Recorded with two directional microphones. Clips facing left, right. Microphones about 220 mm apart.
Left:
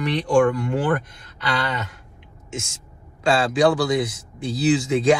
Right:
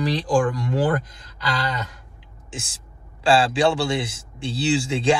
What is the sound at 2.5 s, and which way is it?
Speech, 30° right (ahead or behind).